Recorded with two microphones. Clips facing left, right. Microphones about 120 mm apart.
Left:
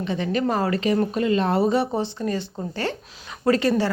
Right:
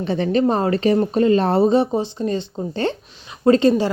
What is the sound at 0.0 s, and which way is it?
Speech, 35° right (ahead or behind).